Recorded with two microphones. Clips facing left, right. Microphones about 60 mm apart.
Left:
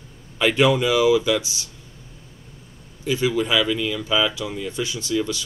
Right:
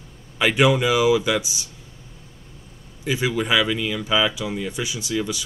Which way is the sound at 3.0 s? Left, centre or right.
Centre.